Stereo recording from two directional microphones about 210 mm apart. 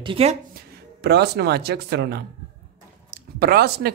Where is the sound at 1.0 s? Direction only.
50° right (ahead or behind).